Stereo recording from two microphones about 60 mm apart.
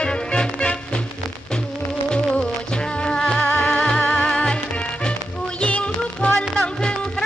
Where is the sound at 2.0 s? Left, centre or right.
Centre.